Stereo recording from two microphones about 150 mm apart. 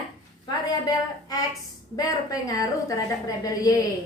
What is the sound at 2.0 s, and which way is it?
A woman's voice, 25° left (ahead or behind).